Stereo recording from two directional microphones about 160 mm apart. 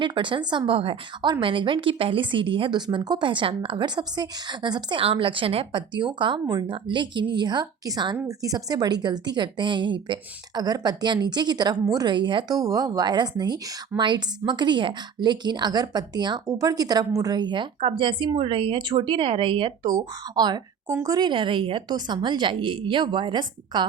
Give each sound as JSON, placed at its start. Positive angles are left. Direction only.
{"t": 0.0, "sound": "a woman's voice", "side_deg": -30}